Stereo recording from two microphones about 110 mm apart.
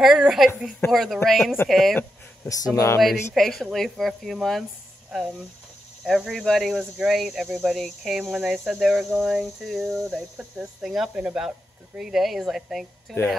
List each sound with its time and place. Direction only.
0.0 s speech: 5° right (ahead or behind)
2.4 s speech: 30° left (ahead or behind)
3.3 s speech: centre (ahead or behind)
6.0 s speech: centre (ahead or behind)